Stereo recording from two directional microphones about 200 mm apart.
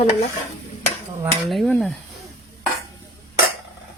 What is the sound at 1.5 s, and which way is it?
Speech, centre (ahead or behind).